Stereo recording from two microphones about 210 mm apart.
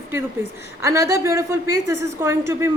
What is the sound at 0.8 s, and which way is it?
A woman's voice, 15° right (ahead or behind).